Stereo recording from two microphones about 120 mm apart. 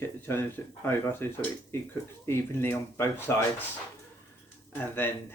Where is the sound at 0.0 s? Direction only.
20° left (ahead or behind).